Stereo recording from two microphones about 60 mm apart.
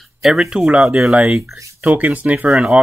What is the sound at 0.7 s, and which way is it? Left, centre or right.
Speech, right.